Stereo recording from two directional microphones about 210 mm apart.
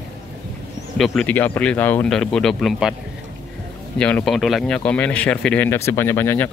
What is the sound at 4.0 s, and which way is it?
Speech, 5° left (ahead or behind).